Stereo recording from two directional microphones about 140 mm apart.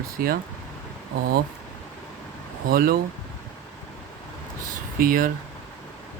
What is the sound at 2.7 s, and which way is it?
Speech, 90° right.